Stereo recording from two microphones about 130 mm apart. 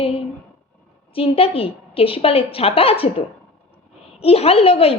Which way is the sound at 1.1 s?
45° left (ahead or behind).